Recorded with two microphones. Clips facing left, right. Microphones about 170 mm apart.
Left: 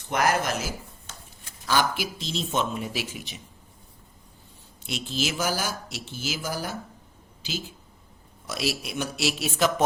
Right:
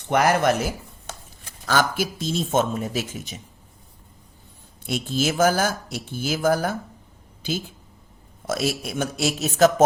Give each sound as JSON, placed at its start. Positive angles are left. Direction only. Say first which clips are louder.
{"t": 0.0, "sound": "speech", "louder": "right 5 dB", "side_deg": -65}
{"t": 1.6, "sound": "speech", "louder": "right 3 dB", "side_deg": -50}
{"t": 4.9, "sound": "speech", "louder": "right 6 dB", "side_deg": -50}
{"t": 8.4, "sound": "speech", "louder": "right 5 dB", "side_deg": -50}